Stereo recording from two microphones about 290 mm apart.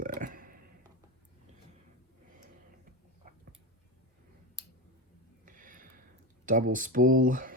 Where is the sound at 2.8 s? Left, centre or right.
Right.